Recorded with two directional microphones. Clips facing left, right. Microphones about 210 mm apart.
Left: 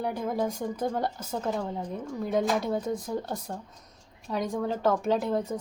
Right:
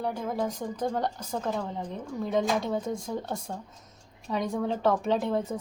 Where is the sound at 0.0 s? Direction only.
10° left (ahead or behind).